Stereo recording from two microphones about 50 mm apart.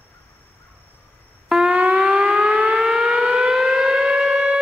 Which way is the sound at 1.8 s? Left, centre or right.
Right.